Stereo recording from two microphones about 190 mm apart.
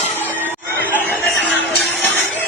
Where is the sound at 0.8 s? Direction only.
10° left (ahead or behind).